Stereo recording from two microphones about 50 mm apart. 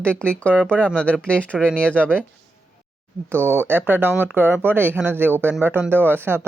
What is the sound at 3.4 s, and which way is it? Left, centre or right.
Speech, left.